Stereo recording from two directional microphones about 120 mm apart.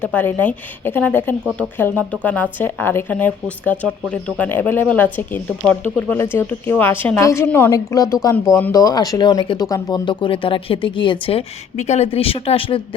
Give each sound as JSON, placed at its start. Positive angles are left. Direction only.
{"t": 0.0, "sound": "speech", "side_deg": 15}
{"t": 7.7, "sound": "speech", "side_deg": 30}
{"t": 10.1, "sound": "speech", "side_deg": 45}
{"t": 11.8, "sound": "speech", "side_deg": 65}